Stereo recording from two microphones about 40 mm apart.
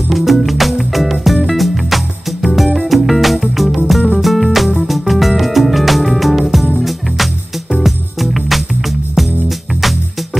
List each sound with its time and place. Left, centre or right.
0.1 s music: centre